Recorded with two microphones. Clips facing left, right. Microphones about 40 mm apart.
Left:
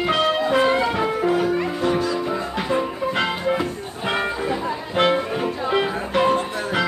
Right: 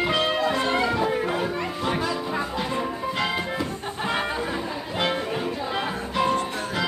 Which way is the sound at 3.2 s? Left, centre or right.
Left.